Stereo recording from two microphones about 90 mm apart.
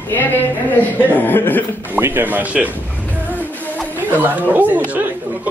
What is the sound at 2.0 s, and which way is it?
Speech, 25° right (ahead or behind).